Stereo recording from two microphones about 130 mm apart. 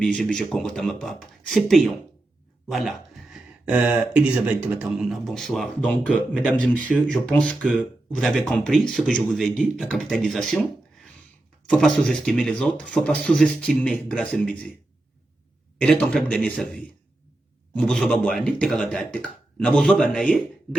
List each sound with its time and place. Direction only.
0.0 s speech: 5° left (ahead or behind)
11.6 s speech: 5° left (ahead or behind)
15.8 s speech: 5° left (ahead or behind)